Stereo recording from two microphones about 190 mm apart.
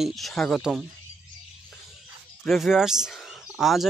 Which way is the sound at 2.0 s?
Centre (ahead or behind).